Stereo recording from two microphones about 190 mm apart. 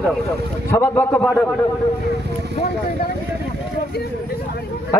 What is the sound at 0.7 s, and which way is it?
Speech, 10° left (ahead or behind).